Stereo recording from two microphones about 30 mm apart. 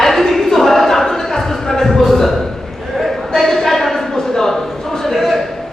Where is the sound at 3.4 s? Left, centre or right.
Centre.